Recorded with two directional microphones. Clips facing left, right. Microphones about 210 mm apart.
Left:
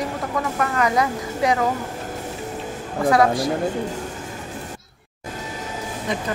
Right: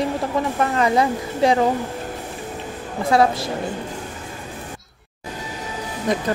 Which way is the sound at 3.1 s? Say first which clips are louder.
Right 1 dB; 25° right (ahead or behind).